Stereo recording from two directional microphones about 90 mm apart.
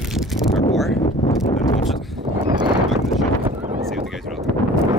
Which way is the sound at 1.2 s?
35° left (ahead or behind).